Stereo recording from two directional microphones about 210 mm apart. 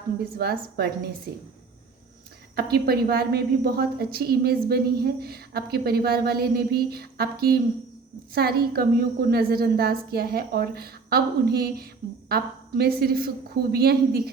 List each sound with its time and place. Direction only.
0.3 s a woman's voice: 50° right (ahead or behind)
2.6 s a woman's voice: 50° right (ahead or behind)